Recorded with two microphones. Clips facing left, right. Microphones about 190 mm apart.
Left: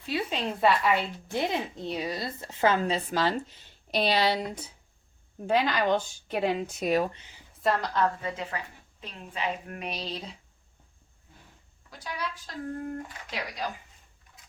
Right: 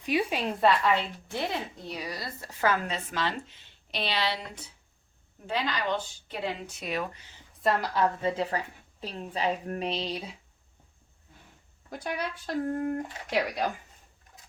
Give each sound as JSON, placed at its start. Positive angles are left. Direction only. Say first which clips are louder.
{"t": 0.0, "sound": "a sound", "louder": "right 3 dB", "side_deg": -15}
{"t": 0.4, "sound": "a woman's voice", "louder": "left 2 dB", "side_deg": 0}
{"t": 7.6, "sound": "a woman's voice", "louder": "even", "side_deg": -5}
{"t": 8.2, "sound": "a woman's voice", "louder": "right 5 dB", "side_deg": -30}
{"t": 11.9, "sound": "speech", "louder": "right 3 dB", "side_deg": -55}